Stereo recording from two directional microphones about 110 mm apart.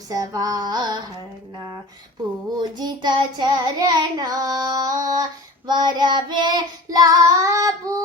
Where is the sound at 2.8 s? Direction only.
40° right (ahead or behind).